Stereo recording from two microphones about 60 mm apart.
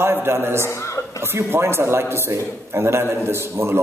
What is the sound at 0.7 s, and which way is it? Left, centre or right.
Speech, left.